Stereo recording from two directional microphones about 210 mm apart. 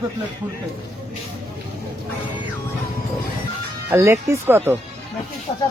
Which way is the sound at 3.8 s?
10° right (ahead or behind).